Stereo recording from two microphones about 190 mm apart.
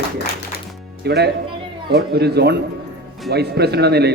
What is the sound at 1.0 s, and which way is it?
A man's voice, 60° right (ahead or behind).